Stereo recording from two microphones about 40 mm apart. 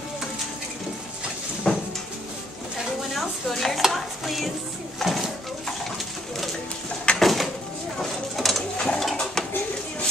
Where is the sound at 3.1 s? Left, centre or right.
Centre.